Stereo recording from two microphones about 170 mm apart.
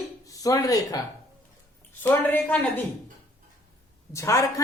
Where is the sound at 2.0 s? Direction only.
10° left (ahead or behind).